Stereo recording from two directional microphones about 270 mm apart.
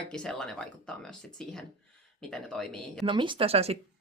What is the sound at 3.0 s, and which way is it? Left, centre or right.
Speech, centre.